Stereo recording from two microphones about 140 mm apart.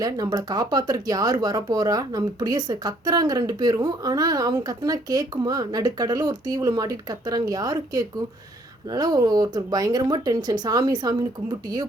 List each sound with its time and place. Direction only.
0.0 s speech: 25° right (ahead or behind)